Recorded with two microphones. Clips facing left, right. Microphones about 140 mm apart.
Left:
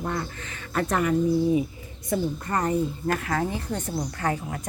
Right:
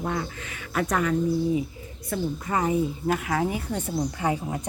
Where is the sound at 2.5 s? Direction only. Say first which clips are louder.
Right 2 dB; 5° right (ahead or behind).